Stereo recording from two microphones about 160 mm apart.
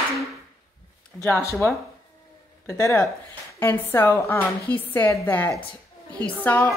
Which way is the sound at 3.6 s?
15° left (ahead or behind).